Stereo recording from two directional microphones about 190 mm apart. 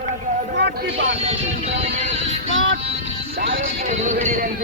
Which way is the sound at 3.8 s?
35° right (ahead or behind).